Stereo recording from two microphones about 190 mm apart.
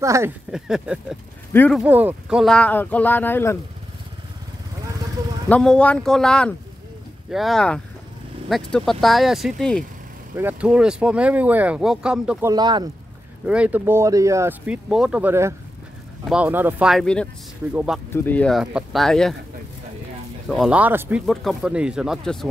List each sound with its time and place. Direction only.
0.0 s speech: 15° right (ahead or behind)
0.5 s speech: 5° right (ahead or behind)
1.5 s speech: 10° left (ahead or behind)
1.8 s speech: 10° right (ahead or behind); by 3.5 s 10° left (ahead or behind)
5.5 s speech: 5° left (ahead or behind)
10.3 s speech: 10° right (ahead or behind)
12.4 s speech: 20° right (ahead or behind)
13.5 s speech: 5° right (ahead or behind)
18.1 s speech: 10° left (ahead or behind)
20.4 s speech: centre (ahead or behind)